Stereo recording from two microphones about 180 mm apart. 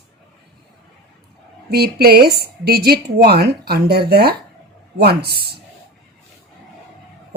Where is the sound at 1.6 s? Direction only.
60° right (ahead or behind).